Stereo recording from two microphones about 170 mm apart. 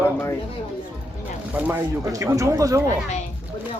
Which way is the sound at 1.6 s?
15° right (ahead or behind).